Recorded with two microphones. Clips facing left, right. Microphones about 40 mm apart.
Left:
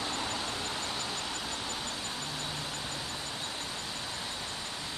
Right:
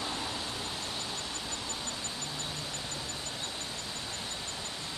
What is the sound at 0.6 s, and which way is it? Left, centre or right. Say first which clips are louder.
Vehicle: left 2 dB; left.